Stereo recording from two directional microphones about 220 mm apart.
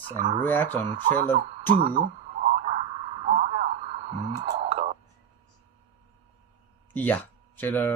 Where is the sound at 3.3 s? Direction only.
30° right (ahead or behind).